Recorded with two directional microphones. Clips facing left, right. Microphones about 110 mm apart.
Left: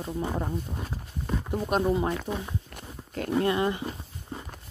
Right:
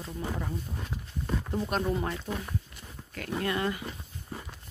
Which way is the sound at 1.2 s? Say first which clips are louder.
Left 2 dB; 10° left (ahead or behind).